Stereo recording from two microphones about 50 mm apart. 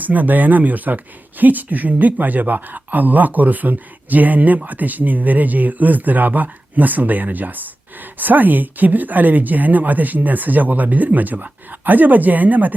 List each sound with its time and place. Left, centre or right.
0.0 s speech: right